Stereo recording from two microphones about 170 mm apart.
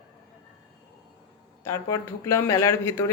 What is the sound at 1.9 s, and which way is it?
Speech, 20° left (ahead or behind).